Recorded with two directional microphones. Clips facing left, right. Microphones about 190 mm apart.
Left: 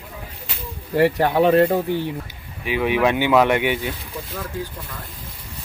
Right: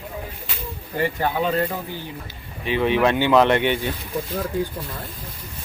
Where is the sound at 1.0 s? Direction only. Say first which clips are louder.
Left 6 dB; 75° left (ahead or behind).